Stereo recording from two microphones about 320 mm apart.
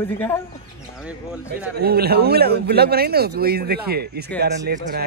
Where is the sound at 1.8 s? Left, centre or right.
Right.